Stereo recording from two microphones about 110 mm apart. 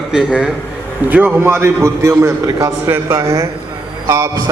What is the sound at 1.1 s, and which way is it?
A man's voice, 20° right (ahead or behind).